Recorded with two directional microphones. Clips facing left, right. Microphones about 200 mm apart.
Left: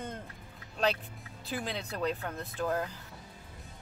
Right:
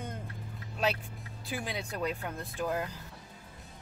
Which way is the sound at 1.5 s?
10° right (ahead or behind).